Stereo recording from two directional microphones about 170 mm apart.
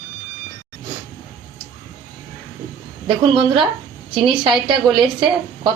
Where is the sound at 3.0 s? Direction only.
30° right (ahead or behind).